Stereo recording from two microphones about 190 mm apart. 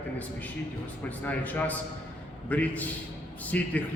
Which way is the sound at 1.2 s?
10° left (ahead or behind).